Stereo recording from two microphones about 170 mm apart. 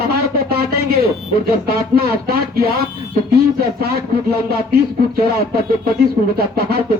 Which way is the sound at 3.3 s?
65° right (ahead or behind).